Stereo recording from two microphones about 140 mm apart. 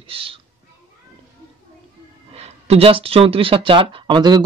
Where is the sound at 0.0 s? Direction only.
40° right (ahead or behind).